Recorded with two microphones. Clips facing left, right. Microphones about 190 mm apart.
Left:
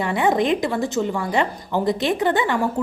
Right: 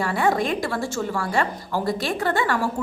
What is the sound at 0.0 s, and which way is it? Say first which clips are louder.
A woman's voice: left 2 dB; 20° left (ahead or behind).